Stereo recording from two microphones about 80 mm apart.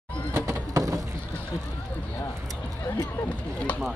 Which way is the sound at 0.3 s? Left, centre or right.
Right.